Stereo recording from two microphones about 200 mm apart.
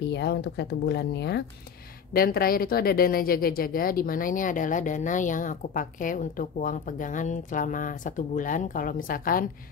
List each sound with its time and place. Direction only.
0.0 s speech: 55° left (ahead or behind)